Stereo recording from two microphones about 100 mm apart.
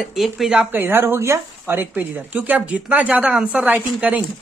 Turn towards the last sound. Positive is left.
turn(degrees=-15)  # may be behind; listen again after turning